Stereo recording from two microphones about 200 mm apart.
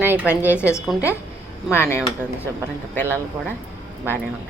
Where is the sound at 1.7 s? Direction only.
10° left (ahead or behind).